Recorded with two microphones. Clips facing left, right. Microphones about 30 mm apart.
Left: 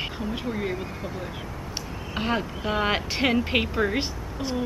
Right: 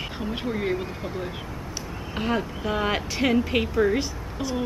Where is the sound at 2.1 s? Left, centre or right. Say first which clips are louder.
Even; centre.